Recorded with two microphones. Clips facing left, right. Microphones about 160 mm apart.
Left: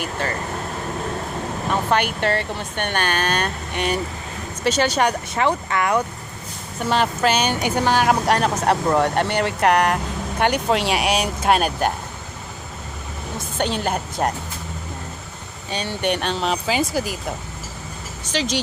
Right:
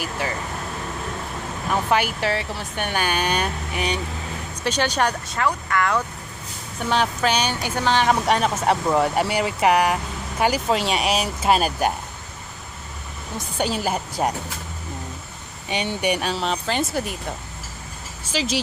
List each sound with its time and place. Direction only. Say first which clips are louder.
0.0 s speech: left 2 dB; 10° right (ahead or behind)
1.9 s speech: left 1 dB; 5° right (ahead or behind)
5.3 s speech: left 2 dB; 20° left (ahead or behind)
6.9 s speech: left 2 dB; centre (ahead or behind)
7.5 s speech: left 2 dB; 15° left (ahead or behind); by 11.9 s centre (ahead or behind)
13.6 s speech: left 1 dB; 5° right (ahead or behind)
15.7 s speech: even; 15° right (ahead or behind)